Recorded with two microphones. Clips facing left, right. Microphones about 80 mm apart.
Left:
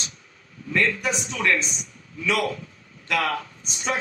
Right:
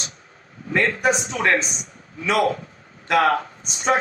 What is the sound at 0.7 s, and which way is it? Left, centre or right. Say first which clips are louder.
A man's voice: right 4 dB; right.